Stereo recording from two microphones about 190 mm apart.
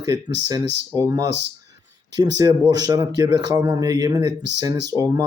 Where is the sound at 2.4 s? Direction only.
20° right (ahead or behind).